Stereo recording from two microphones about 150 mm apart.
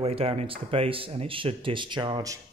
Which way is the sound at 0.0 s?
40° right (ahead or behind).